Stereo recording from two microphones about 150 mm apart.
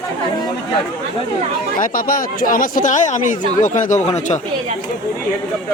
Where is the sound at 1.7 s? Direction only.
70° left (ahead or behind); by 4.4 s 50° left (ahead or behind).